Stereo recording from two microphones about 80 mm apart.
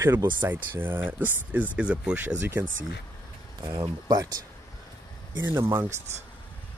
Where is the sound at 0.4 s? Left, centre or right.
Right.